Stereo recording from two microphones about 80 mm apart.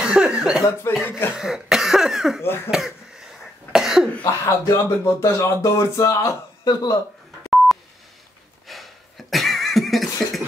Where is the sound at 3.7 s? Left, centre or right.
Centre.